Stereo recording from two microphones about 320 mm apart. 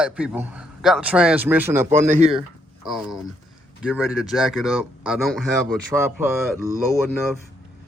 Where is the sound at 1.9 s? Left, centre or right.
Right.